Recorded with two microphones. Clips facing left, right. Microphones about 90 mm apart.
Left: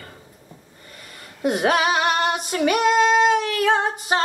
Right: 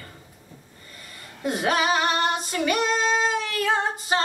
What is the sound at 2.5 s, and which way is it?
Female singing, 30° left (ahead or behind).